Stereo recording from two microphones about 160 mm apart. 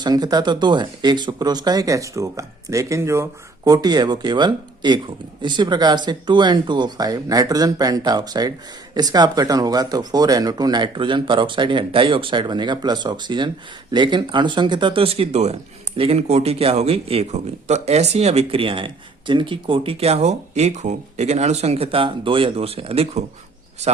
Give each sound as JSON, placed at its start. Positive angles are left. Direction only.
{"t": 0.0, "sound": "a man's voice", "side_deg": -25}